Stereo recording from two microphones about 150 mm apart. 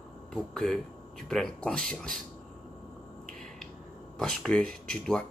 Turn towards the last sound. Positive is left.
turn(degrees=5)  # may be behind; listen again after turning